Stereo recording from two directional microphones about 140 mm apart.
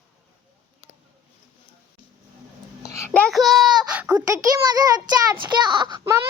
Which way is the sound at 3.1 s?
5° left (ahead or behind).